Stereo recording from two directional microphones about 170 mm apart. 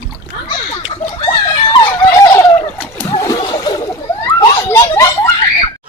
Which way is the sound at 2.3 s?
15° left (ahead or behind).